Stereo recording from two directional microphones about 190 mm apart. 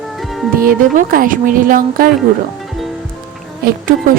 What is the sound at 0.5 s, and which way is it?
A woman's voice, 50° right (ahead or behind).